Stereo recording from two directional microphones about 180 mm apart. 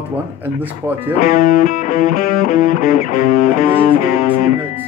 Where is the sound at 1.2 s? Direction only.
50° left (ahead or behind).